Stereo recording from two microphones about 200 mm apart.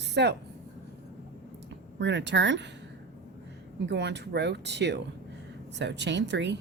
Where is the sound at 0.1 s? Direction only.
55° right (ahead or behind).